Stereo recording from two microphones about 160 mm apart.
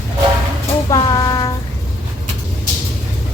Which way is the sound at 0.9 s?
25° left (ahead or behind).